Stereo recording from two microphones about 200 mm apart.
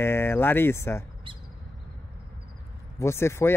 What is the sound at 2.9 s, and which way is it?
Speech, 15° left (ahead or behind).